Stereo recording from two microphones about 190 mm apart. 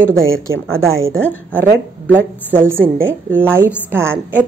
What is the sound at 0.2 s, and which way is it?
Speech, 90° right.